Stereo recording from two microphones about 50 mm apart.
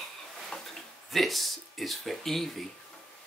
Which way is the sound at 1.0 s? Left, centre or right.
Centre.